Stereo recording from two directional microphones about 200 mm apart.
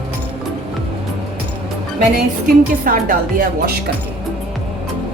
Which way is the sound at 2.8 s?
45° right (ahead or behind).